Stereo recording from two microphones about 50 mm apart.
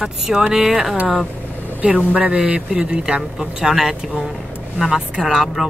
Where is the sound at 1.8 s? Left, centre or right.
Right.